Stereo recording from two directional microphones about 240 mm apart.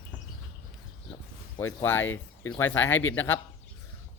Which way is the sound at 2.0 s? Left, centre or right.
Left.